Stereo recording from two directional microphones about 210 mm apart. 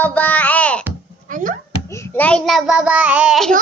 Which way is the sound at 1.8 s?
15° left (ahead or behind).